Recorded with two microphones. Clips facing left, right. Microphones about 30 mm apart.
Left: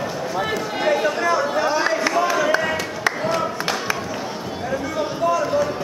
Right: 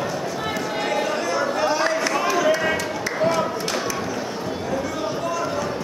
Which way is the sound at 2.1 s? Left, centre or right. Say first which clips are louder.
Even; centre.